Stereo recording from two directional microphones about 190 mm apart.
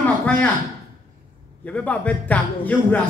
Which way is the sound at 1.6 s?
5° left (ahead or behind).